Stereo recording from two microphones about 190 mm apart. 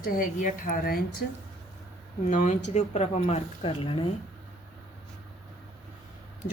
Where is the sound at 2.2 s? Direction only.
45° left (ahead or behind); by 4.1 s 25° left (ahead or behind).